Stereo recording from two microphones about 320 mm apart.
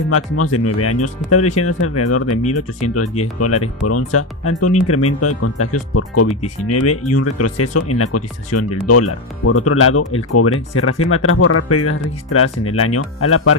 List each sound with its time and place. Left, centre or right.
0.1 s speech: left